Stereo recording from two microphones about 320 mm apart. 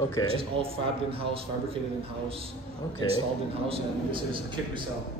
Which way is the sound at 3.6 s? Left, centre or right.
Centre.